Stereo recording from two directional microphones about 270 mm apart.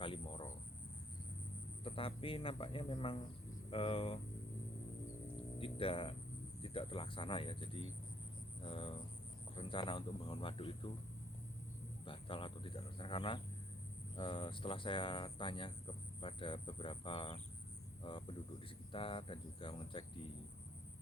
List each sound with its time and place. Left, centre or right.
0.0 s cricket: centre
1.8 s speech: centre
5.5 s speech: centre
12.0 s speech: centre